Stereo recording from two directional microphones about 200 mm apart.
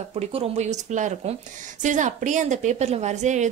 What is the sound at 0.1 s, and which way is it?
A woman's voice, 30° right (ahead or behind).